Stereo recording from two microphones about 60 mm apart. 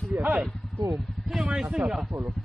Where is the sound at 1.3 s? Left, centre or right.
Centre.